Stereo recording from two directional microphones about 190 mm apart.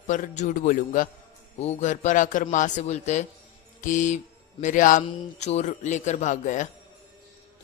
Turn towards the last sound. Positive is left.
turn(degrees=40)  # may be behind; listen again after turning